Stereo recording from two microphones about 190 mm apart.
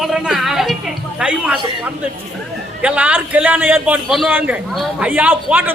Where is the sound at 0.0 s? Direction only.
Centre (ahead or behind).